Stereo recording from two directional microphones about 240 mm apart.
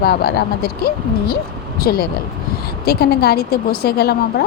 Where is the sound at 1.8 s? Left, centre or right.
Left.